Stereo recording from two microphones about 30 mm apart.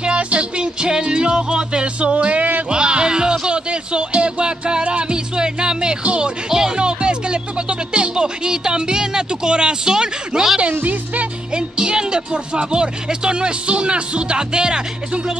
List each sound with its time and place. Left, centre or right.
0.0 s music: right
2.7 s music: right
8.5 s a sound: right
10.7 s music: right
11.5 s speech: right